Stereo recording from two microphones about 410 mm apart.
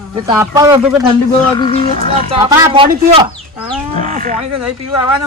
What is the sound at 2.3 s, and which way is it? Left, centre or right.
Speech, centre.